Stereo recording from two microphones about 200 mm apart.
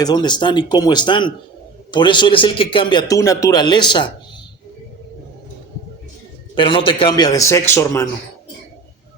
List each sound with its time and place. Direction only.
0.0 s a man's voice: 20° left (ahead or behind)
6.6 s a man's voice: 25° left (ahead or behind)